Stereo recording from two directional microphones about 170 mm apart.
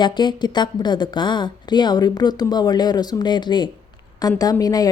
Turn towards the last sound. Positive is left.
turn(degrees=20)  # may be behind; listen again after turning